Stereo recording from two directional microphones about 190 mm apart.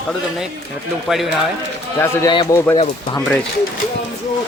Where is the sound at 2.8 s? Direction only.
25° left (ahead or behind).